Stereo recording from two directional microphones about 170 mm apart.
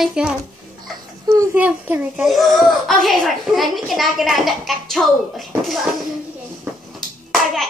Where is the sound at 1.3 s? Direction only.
20° right (ahead or behind); by 5.9 s centre (ahead or behind).